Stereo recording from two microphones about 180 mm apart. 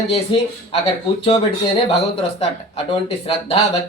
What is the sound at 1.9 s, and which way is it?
Speech, 35° left (ahead or behind).